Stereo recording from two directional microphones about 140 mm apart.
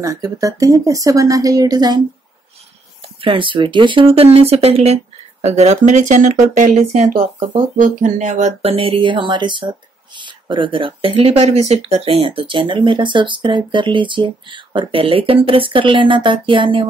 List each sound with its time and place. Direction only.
0.0 s speech: 25° right (ahead or behind)
3.2 s speech: 35° right (ahead or behind); by 8.7 s 55° right (ahead or behind)
8.7 s speech: 40° right (ahead or behind)